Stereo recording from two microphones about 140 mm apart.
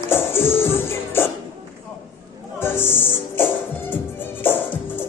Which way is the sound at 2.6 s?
15° left (ahead or behind).